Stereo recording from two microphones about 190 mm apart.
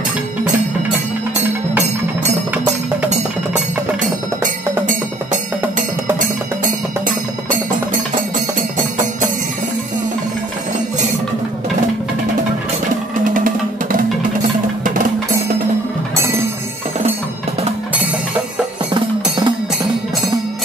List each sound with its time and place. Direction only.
3.1 s music: 40° right (ahead or behind)
8.5 s music: 45° right (ahead or behind)
13.2 s music: 45° right (ahead or behind)
18.9 s music: 25° right (ahead or behind)